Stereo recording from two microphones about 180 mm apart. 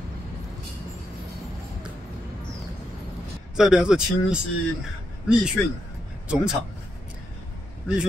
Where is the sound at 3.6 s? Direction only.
5° right (ahead or behind).